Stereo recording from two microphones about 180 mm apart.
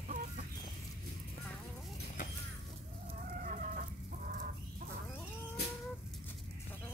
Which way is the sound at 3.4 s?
45° right (ahead or behind).